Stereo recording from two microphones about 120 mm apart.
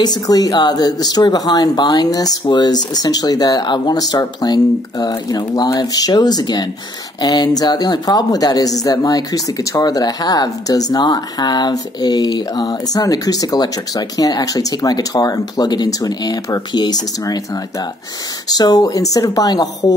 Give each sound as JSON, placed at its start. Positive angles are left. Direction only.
{"t": 0.0, "sound": "speech", "side_deg": 35}
{"t": 18.5, "sound": "a woman's voice", "side_deg": 30}